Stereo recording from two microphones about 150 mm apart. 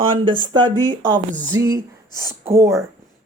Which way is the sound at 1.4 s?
20° right (ahead or behind).